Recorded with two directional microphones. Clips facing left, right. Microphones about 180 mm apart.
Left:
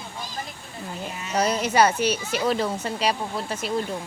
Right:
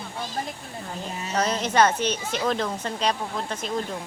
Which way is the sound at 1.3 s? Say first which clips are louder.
Left 2 dB; 10° left (ahead or behind).